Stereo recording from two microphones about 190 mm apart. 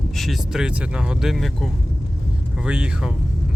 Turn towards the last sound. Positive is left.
turn(degrees=-5)  # may be behind; listen again after turning